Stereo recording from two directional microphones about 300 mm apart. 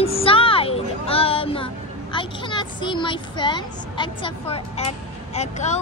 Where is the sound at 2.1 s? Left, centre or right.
Centre.